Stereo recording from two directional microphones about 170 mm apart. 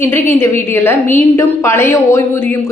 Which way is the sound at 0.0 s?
15° left (ahead or behind).